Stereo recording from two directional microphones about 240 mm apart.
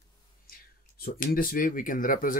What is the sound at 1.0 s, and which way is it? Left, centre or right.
Speech, left.